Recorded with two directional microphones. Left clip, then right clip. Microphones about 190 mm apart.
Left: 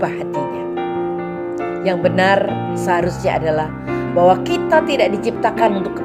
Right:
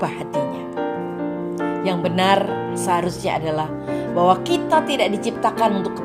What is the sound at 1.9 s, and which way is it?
A woman's voice, 50° right (ahead or behind).